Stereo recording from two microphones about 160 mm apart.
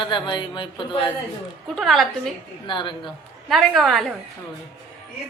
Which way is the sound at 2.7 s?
30° left (ahead or behind).